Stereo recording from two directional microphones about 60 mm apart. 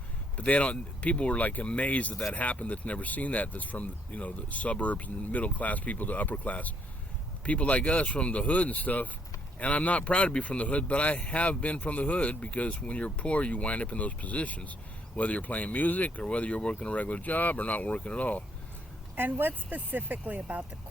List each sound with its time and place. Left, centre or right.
0.3 s speech: left
19.1 s speech: right